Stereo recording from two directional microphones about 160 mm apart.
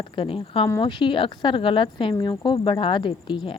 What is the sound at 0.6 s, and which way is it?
Speech, 25° left (ahead or behind).